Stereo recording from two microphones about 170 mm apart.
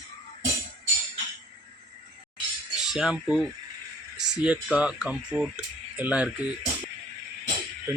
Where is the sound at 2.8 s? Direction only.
5° right (ahead or behind).